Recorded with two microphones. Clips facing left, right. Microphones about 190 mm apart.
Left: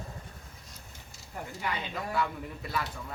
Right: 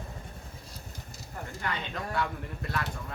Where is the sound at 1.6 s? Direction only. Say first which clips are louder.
Even; 5° left (ahead or behind).